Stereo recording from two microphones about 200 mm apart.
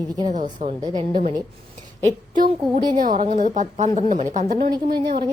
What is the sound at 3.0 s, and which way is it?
A woman's voice, 40° right (ahead or behind).